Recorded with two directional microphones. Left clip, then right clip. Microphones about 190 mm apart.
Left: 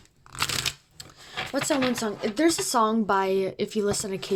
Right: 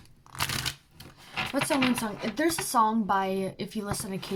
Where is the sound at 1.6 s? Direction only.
45° left (ahead or behind).